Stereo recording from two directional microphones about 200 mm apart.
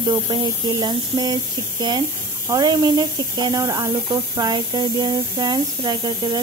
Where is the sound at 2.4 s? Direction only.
20° right (ahead or behind).